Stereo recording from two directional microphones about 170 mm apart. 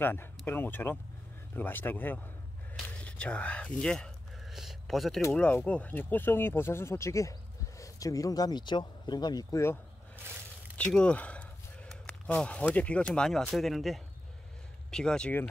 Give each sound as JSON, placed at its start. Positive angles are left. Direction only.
{"t": 0.0, "sound": "speech", "side_deg": 10}
{"t": 3.0, "sound": "a sound", "side_deg": 5}
{"t": 5.2, "sound": "speech", "side_deg": 10}
{"t": 10.8, "sound": "speech", "side_deg": 5}